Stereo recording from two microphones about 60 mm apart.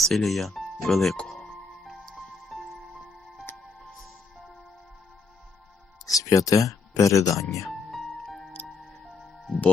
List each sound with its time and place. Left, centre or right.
0.0 s speech: centre
1.3 s music: centre
6.1 s speech: left
7.7 s music: centre